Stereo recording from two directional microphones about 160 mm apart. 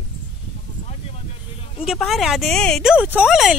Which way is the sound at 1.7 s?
Centre (ahead or behind).